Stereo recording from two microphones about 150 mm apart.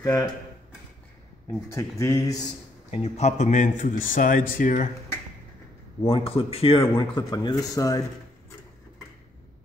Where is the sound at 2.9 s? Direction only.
45° left (ahead or behind).